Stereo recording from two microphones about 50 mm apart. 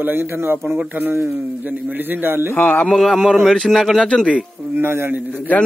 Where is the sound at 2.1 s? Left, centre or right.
Right.